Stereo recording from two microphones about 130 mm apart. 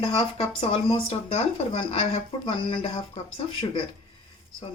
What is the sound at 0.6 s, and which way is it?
Speech, 45° left (ahead or behind).